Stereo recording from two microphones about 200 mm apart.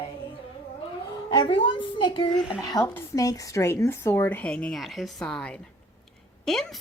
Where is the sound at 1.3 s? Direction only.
25° left (ahead or behind); by 6.8 s centre (ahead or behind).